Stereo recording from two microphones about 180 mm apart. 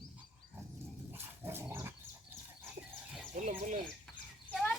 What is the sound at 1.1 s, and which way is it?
Dog, 15° right (ahead or behind).